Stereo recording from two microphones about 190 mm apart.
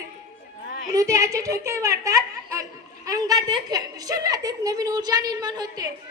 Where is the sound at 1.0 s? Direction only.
15° right (ahead or behind).